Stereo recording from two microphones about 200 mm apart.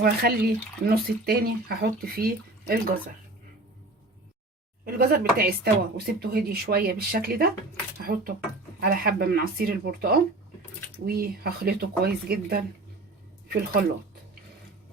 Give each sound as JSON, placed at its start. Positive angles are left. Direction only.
{"t": 0.0, "sound": "speech", "side_deg": -50}
{"t": 4.9, "sound": "speech", "side_deg": -45}